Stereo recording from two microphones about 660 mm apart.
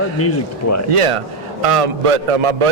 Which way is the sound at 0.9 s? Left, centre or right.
Right.